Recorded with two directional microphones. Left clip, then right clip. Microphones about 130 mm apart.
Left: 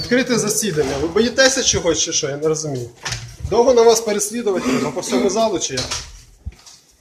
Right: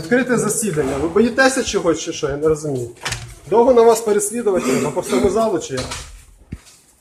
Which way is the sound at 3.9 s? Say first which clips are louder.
Right 1 dB; centre (ahead or behind).